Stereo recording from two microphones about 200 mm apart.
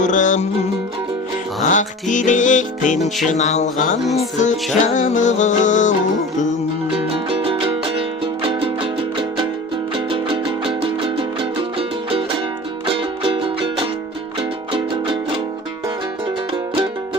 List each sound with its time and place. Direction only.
0.0 s music: 40° left (ahead or behind)
1.7 s music: 40° left (ahead or behind)
4.0 s music: centre (ahead or behind)
4.4 s music: 35° left (ahead or behind)
6.9 s music: 25° right (ahead or behind)